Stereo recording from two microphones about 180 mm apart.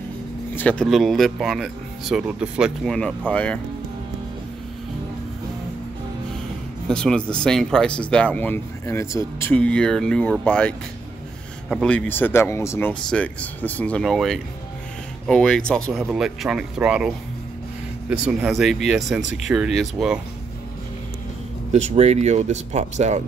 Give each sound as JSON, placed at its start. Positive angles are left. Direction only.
{"t": 0.6, "sound": "speech", "side_deg": 5}
{"t": 6.9, "sound": "speech", "side_deg": 5}
{"t": 11.7, "sound": "speech", "side_deg": 5}
{"t": 18.1, "sound": "speech", "side_deg": -5}
{"t": 21.7, "sound": "speech", "side_deg": -35}